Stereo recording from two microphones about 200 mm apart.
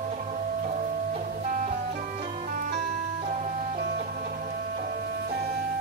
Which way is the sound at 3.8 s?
45° right (ahead or behind).